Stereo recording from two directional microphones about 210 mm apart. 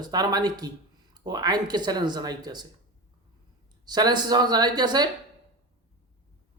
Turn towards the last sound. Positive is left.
turn(degrees=-20)  # may be behind; listen again after turning